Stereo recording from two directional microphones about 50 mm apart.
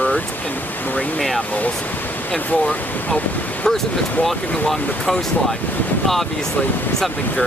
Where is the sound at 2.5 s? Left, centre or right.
Left.